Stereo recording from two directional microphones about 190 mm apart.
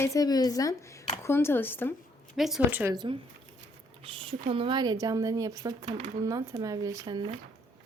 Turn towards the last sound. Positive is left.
turn(degrees=-20)  # may be behind; listen again after turning